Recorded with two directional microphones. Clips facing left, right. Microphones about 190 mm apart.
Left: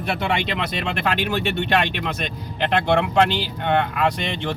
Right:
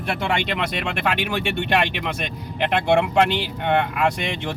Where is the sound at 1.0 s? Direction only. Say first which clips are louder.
Left 1 dB; 10° right (ahead or behind).